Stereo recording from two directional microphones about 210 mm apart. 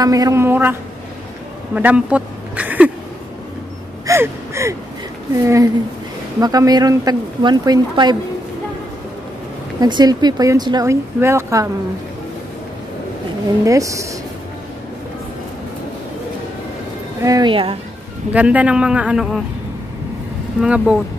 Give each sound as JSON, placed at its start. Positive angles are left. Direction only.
{"t": 0.0, "sound": "speech", "side_deg": -15}
{"t": 1.8, "sound": "a sound", "side_deg": -5}
{"t": 4.0, "sound": "gasp", "side_deg": -15}
{"t": 5.3, "sound": "speech", "side_deg": -15}
{"t": 9.8, "sound": "speech", "side_deg": -20}
{"t": 13.7, "sound": "speech", "side_deg": -15}
{"t": 17.2, "sound": "speech", "side_deg": -20}
{"t": 18.3, "sound": "a man's voice", "side_deg": -5}
{"t": 20.6, "sound": "a man's voice", "side_deg": -5}